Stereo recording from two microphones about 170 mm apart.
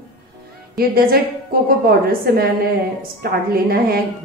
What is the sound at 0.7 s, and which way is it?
A woman's voice, 65° right (ahead or behind).